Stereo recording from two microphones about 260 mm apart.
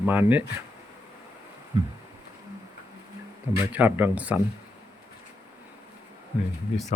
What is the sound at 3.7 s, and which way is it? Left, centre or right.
Speech, centre.